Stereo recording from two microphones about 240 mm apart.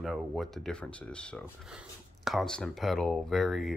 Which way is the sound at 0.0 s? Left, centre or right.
Centre.